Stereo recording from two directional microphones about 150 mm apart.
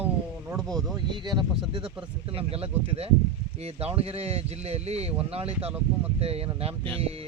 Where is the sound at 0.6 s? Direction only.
Centre (ahead or behind).